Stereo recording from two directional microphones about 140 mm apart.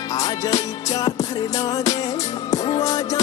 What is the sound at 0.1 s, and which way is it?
Music, 25° left (ahead or behind).